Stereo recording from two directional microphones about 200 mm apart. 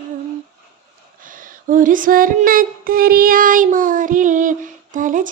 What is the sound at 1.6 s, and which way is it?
Child singing, 40° right (ahead or behind).